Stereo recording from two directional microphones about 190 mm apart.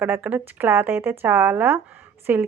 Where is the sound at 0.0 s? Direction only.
10° right (ahead or behind).